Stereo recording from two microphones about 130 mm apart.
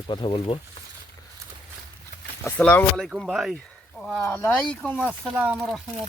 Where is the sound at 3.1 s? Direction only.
5° right (ahead or behind).